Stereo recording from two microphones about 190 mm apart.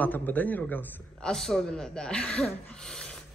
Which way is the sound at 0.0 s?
10° left (ahead or behind).